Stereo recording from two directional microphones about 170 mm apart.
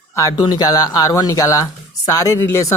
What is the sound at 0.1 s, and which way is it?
Speech, 20° left (ahead or behind).